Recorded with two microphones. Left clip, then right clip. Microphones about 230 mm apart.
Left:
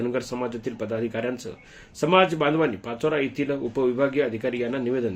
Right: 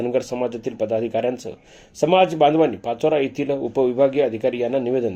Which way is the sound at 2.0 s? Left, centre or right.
Left.